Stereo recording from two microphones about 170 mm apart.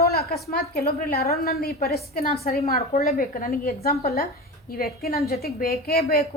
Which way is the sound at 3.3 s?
60° left (ahead or behind).